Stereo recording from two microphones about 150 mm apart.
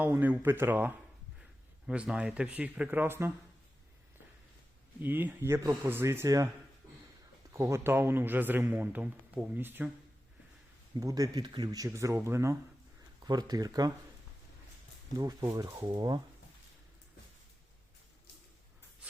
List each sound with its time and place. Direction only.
0.0 s speech: 10° right (ahead or behind)
4.9 s speech: 10° right (ahead or behind)
7.5 s speech: 20° right (ahead or behind)
11.0 s speech: 25° right (ahead or behind)
15.2 s speech: 25° right (ahead or behind)